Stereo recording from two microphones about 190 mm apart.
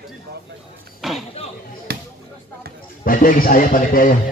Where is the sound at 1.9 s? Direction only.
55° right (ahead or behind).